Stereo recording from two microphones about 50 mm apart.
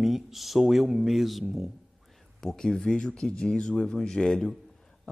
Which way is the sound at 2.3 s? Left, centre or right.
Centre.